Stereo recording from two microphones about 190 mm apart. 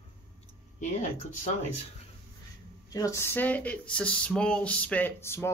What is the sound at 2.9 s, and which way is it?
Speech, 15° left (ahead or behind).